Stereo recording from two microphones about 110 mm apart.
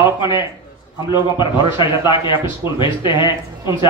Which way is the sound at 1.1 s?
45° left (ahead or behind).